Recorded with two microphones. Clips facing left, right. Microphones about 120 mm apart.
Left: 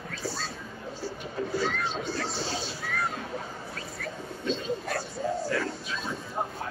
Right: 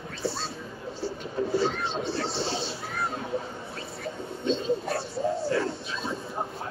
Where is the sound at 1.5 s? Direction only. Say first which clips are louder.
Right 2 dB; 30° right (ahead or behind).